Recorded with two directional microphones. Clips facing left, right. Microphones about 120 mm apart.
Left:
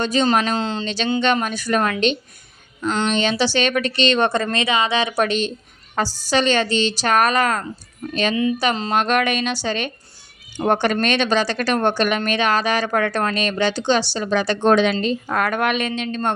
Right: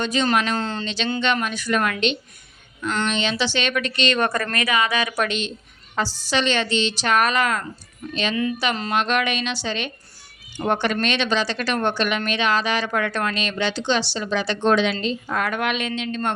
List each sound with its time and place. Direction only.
0.0 s a woman's voice: 35° left (ahead or behind)
0.5 s speech: 25° left (ahead or behind)
1.2 s a woman's voice: 40° left (ahead or behind)
2.8 s speech: 25° left (ahead or behind)
3.1 s a woman's voice: 40° left (ahead or behind)
8.7 s speech: 30° left (ahead or behind)
9.0 s a woman's voice: 45° left (ahead or behind)